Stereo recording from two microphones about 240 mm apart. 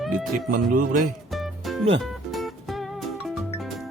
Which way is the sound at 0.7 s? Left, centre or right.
Right.